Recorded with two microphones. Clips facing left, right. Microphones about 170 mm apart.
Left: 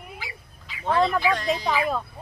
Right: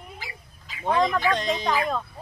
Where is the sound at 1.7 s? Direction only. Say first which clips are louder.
Even; 5° left (ahead or behind).